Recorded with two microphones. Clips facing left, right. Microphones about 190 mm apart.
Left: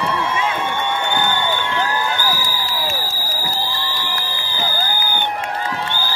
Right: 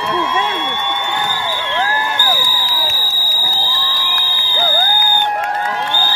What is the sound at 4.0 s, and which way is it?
Fire alarm, 90° right.